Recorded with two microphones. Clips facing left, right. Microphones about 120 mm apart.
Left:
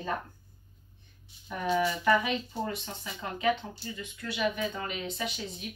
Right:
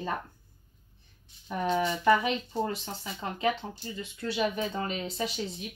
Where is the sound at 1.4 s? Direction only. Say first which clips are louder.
Even; 25° right (ahead or behind).